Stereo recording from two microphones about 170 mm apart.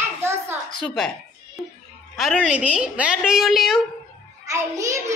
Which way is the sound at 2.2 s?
5° right (ahead or behind).